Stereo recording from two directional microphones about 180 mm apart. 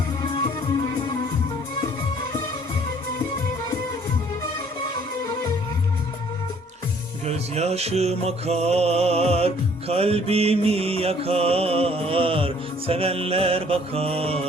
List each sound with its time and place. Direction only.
7.3 s mantra: 35° right (ahead or behind)